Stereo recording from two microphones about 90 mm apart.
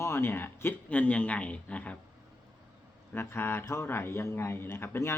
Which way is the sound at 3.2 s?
25° left (ahead or behind).